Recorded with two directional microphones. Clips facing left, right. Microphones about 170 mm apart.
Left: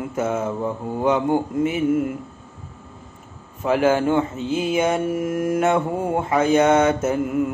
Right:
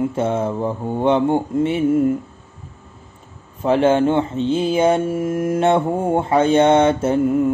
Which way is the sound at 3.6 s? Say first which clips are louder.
Right 3 dB; 30° right (ahead or behind).